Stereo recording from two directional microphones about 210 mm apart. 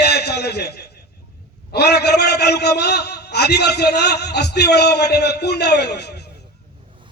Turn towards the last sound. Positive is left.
turn(degrees=50)  # may be behind; listen again after turning